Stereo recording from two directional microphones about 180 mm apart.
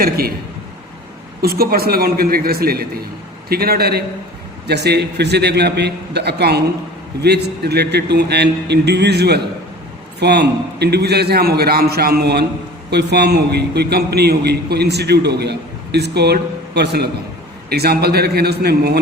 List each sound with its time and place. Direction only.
0.0 s a man's voice: 60° right (ahead or behind)
1.4 s a man's voice: 60° right (ahead or behind)